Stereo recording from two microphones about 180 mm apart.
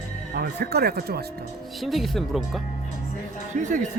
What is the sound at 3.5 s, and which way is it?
Speech, 45° right (ahead or behind).